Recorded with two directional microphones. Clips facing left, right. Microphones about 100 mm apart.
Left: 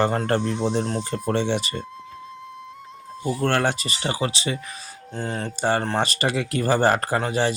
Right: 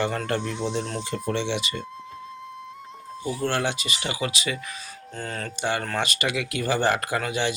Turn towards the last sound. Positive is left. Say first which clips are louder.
# left 4 dB
turn(degrees=35)  # may be behind; listen again after turning